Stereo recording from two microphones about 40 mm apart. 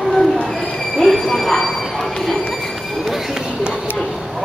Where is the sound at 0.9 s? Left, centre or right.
Centre.